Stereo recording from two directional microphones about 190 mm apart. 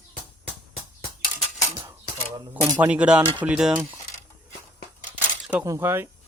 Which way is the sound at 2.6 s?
20° right (ahead or behind).